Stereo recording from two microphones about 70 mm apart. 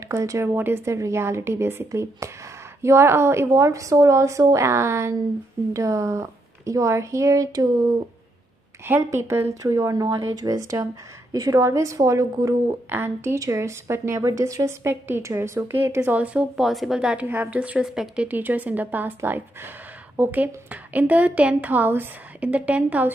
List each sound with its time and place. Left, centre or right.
0.1 s speech: right
0.6 s speech: right
1.9 s speech: right
3.5 s speech: right
8.8 s speech: right
9.6 s speech: right
10.0 s speech: right
12.9 s speech: right
14.9 s speech: right
16.1 s a woman's voice: centre
16.5 s a woman's voice: centre
17.3 s a woman's voice: right
17.6 s a woman's voice: centre
18.3 s a woman's voice: right